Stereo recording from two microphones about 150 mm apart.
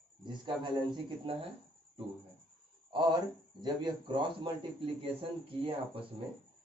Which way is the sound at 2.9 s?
30° right (ahead or behind).